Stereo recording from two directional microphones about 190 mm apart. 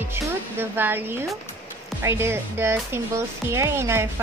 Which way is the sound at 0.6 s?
10° right (ahead or behind).